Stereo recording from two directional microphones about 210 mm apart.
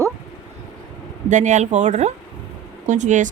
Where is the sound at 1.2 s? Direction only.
35° right (ahead or behind).